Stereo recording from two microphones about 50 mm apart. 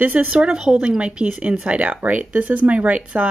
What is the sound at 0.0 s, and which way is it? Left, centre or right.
A woman's voice, right.